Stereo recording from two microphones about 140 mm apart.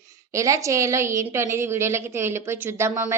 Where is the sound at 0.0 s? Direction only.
20° right (ahead or behind).